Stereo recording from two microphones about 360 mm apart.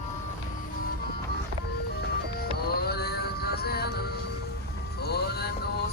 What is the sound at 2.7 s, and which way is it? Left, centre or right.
Music, left.